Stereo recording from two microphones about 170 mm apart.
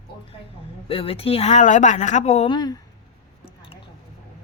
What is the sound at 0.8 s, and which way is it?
A woman's voice, 35° left (ahead or behind).